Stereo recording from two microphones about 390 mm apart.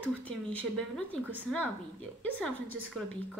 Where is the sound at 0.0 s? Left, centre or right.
Centre.